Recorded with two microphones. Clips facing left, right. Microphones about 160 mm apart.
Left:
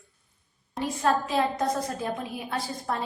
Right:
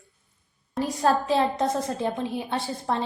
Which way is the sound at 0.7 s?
35° right (ahead or behind).